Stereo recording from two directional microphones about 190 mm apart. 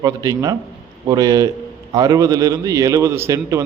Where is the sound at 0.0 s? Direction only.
20° right (ahead or behind).